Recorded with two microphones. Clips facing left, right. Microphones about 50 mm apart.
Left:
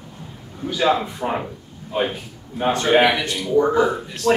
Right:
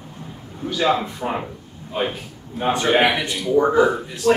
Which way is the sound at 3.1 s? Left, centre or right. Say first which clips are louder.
Left 1 dB; centre.